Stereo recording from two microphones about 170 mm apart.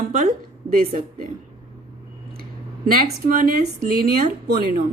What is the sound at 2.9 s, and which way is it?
Speech, 55° right (ahead or behind).